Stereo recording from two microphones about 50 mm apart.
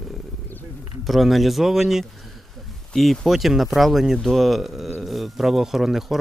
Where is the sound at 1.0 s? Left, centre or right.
Centre.